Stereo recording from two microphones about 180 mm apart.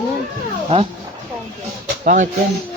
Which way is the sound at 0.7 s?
35° right (ahead or behind).